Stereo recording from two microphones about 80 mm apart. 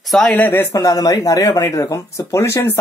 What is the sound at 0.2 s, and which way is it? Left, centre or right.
Speech, left.